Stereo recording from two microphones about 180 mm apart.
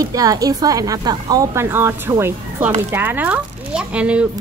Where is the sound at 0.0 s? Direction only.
20° right (ahead or behind).